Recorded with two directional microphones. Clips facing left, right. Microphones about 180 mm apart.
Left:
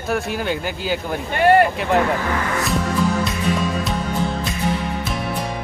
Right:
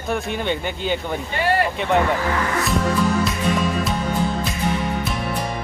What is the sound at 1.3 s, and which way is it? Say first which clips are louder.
Speech: left 7 dB; 50° left (ahead or behind).